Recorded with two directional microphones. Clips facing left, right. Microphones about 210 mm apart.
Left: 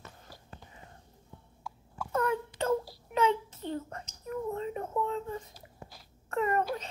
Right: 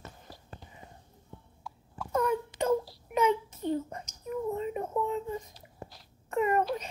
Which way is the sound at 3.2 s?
10° right (ahead or behind).